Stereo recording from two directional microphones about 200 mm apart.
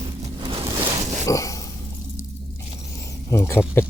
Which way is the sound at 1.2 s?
15° left (ahead or behind).